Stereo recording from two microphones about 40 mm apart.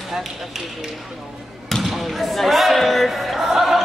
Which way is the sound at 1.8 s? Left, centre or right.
Centre.